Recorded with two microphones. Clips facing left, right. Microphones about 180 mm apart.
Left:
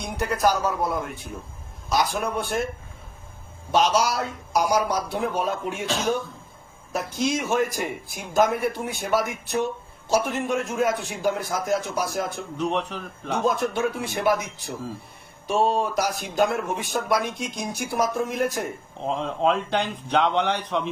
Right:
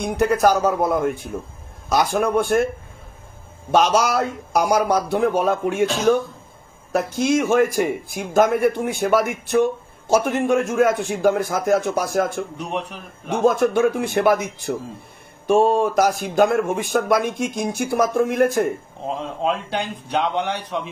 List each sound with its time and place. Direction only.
0.0 s speech: 55° right (ahead or behind)
3.7 s a man's voice: 55° right (ahead or behind)
19.4 s speech: 10° right (ahead or behind)